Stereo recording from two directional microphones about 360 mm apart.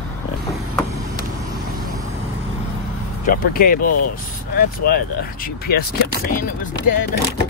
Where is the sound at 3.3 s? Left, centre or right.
Left.